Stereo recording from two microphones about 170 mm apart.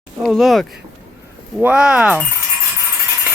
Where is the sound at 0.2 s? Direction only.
Centre (ahead or behind).